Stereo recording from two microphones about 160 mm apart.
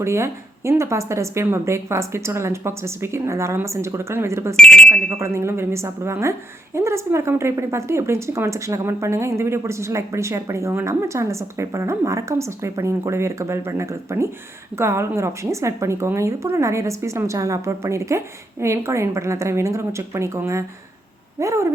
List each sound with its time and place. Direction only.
0.0 s a woman's voice: 15° right (ahead or behind)
4.5 s speech: 5° left (ahead or behind)
5.2 s a woman's voice: 15° right (ahead or behind)